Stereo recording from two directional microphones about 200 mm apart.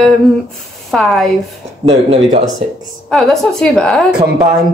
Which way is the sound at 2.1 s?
35° right (ahead or behind).